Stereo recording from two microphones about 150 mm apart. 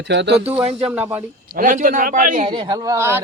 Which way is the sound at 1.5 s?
65° right (ahead or behind).